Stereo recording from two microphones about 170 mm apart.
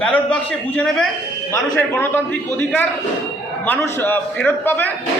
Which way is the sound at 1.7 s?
15° left (ahead or behind).